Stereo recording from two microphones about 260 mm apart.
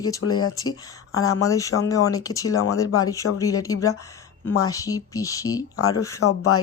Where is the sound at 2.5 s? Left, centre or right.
Left.